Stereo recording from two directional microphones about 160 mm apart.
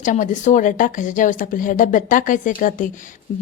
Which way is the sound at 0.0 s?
50° left (ahead or behind).